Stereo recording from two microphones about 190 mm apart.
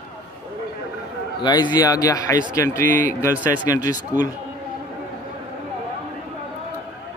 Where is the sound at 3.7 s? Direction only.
15° left (ahead or behind).